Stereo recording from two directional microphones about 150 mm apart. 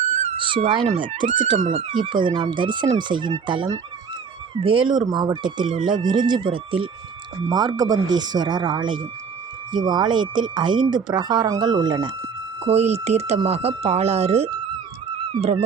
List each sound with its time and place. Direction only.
0.0 s cat: 50° right (ahead or behind)
0.3 s cat: 35° right (ahead or behind)
1.2 s speech: 50° right (ahead or behind)
1.7 s speech: 30° right (ahead or behind)
12.6 s speech: 45° right (ahead or behind)